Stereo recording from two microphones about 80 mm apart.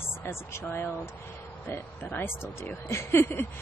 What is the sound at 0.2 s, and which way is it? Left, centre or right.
Speech, left.